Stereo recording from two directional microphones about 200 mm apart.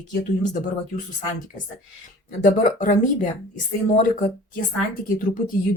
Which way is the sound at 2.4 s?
40° left (ahead or behind).